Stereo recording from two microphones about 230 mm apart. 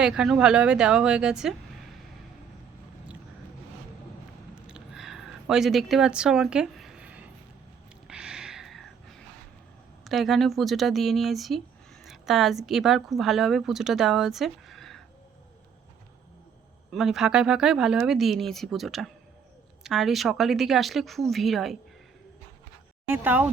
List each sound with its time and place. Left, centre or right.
0.0 s speech: centre
4.5 s a sound: centre
10.0 s a woman's voice: centre
16.9 s speech: centre
23.0 s speech: centre